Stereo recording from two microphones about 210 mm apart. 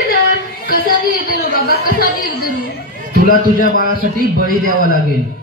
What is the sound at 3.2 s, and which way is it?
A man's voice, 45° left (ahead or behind).